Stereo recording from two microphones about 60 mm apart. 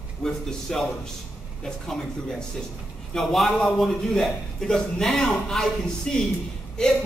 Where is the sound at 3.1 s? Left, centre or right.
Centre.